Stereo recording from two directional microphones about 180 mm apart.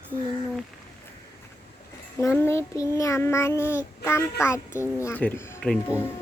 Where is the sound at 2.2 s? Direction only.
15° left (ahead or behind).